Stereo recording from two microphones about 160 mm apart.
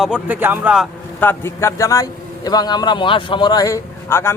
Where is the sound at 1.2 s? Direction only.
15° left (ahead or behind).